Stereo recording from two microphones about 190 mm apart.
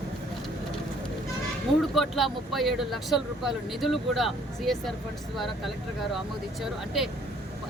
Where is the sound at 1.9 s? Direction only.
Centre (ahead or behind).